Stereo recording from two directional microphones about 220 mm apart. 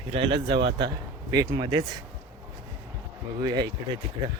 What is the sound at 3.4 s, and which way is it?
Speech, 15° right (ahead or behind).